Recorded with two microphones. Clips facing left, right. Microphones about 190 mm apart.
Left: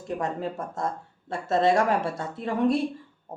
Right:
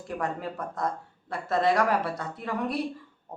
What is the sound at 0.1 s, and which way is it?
Speech, 20° left (ahead or behind).